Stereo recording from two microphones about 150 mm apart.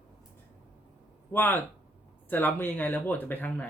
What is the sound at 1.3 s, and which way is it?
Speech, 15° left (ahead or behind).